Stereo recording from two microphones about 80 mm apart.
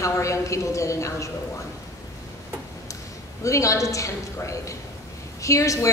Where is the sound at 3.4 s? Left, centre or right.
Left.